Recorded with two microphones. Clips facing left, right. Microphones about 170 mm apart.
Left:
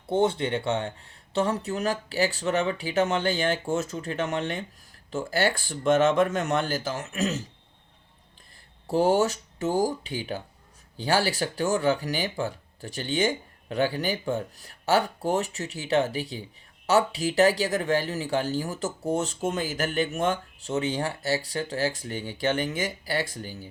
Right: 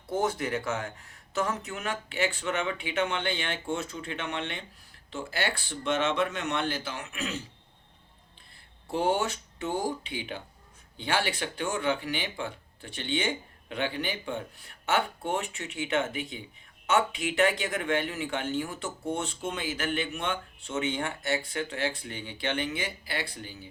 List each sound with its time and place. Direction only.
0.1 s speech: 30° left (ahead or behind)
8.9 s speech: 40° left (ahead or behind)